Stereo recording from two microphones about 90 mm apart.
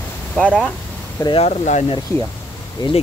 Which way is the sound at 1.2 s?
45° left (ahead or behind).